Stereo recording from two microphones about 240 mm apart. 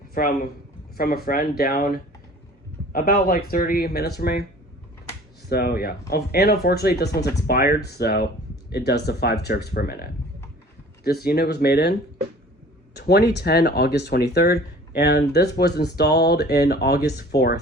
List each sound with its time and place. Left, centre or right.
0.1 s speech: left
5.5 s speech: left